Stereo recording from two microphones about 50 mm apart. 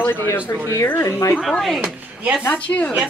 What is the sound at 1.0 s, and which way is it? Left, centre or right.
Speech, left.